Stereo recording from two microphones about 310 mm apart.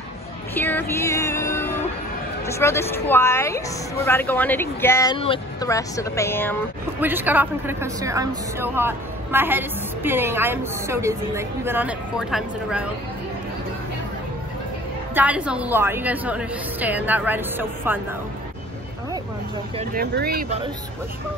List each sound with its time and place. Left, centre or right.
0.6 s music: centre
2.4 s a woman's voice: centre
7.0 s a woman's voice: centre
15.1 s a woman's voice: centre
19.8 s speech: right